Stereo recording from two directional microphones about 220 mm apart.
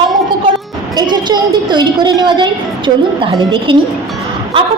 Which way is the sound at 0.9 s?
20° right (ahead or behind).